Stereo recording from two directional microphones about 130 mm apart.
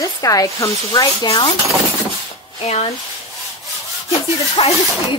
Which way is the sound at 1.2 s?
45° left (ahead or behind).